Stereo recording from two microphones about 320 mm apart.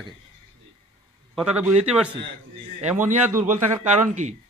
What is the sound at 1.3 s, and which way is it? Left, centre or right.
A man's voice, centre.